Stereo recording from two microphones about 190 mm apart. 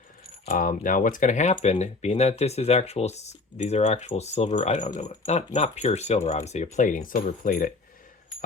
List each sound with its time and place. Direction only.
0.4 s speech: 45° left (ahead or behind)